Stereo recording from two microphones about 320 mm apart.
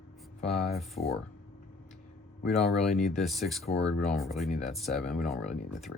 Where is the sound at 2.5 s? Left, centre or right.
Centre.